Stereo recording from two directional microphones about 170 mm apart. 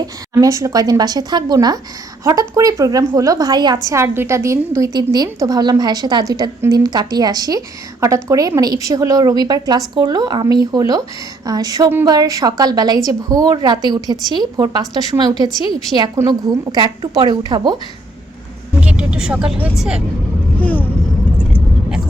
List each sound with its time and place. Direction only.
0.0 s a woman's voice: 20° right (ahead or behind)
18.8 s speech: 5° right (ahead or behind)
20.6 s speech: 10° left (ahead or behind)